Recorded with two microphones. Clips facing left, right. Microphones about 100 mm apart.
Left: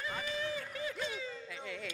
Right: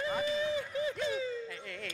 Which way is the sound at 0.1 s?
20° right (ahead or behind).